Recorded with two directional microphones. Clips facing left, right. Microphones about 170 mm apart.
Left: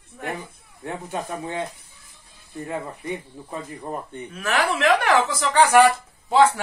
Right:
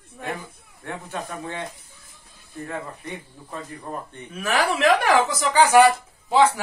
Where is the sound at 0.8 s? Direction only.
20° left (ahead or behind).